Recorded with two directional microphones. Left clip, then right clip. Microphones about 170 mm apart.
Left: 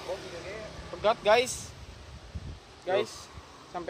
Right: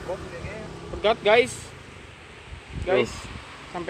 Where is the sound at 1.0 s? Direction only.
60° left (ahead or behind).